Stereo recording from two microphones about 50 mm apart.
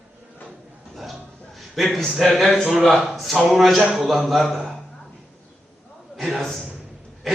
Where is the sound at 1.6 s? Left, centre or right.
Centre.